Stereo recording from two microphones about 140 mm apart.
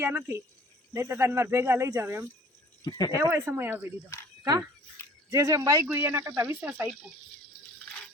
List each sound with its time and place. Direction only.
0.0 s speech: 15° right (ahead or behind)
2.8 s speech: 30° left (ahead or behind)
3.2 s speech: 20° right (ahead or behind)
5.3 s speech: 25° right (ahead or behind)